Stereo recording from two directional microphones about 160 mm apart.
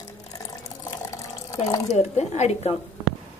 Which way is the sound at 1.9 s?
45° left (ahead or behind).